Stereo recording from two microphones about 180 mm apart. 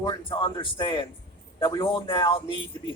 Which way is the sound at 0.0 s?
25° left (ahead or behind).